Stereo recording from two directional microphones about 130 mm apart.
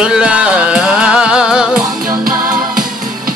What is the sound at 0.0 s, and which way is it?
Music, 5° right (ahead or behind).